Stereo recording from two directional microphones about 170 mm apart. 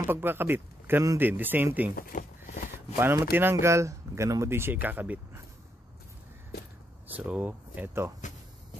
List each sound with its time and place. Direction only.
0.0 s speech: 15° right (ahead or behind)
2.0 s a sound: 55° left (ahead or behind)
3.0 s speech: 15° right (ahead or behind)
7.1 s speech: 10° right (ahead or behind)